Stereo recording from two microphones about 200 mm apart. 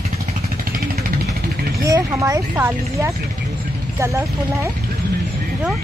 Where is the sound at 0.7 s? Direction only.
45° right (ahead or behind).